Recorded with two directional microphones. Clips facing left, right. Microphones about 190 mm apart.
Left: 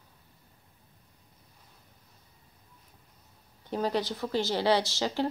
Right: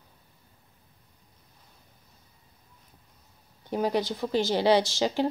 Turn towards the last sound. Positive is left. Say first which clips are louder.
# right 4 dB
turn(degrees=-15)  # may be behind; listen again after turning